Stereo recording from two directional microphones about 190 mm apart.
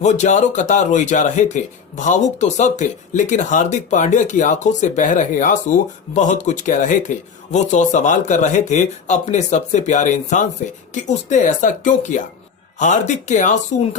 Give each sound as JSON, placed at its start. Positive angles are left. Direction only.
{"t": 0.0, "sound": "a man's voice", "side_deg": 40}